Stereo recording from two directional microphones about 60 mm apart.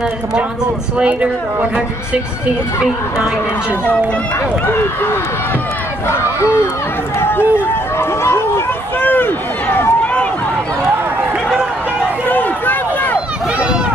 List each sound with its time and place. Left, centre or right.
0.9 s speech: right
6.0 s battle cry: left
7.2 s run: left
8.0 s battle cry: left
9.0 s speech: left
12.3 s run: left